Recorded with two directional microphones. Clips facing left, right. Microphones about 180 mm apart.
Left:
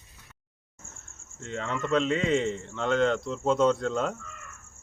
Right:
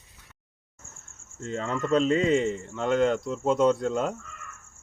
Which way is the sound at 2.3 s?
5° right (ahead or behind).